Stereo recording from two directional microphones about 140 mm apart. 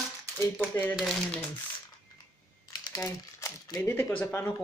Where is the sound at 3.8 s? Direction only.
15° left (ahead or behind).